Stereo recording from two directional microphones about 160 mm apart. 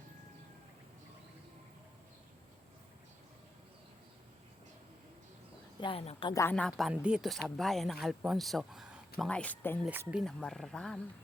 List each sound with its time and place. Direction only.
5.8 s a woman's voice: 35° left (ahead or behind)
6.3 s speech: 15° left (ahead or behind)
6.6 s speech: centre (ahead or behind)
9.3 s speech: 10° left (ahead or behind)
9.9 s speech: 10° right (ahead or behind)